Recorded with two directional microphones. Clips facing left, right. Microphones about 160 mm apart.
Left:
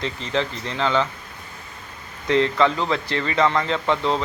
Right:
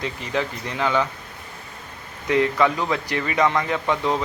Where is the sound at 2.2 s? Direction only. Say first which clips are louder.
Left 1 dB; 15° right (ahead or behind).